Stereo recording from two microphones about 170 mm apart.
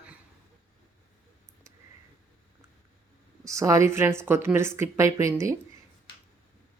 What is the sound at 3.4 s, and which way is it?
Speech, 20° right (ahead or behind).